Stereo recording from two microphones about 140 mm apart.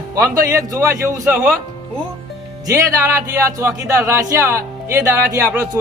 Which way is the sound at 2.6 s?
20° right (ahead or behind).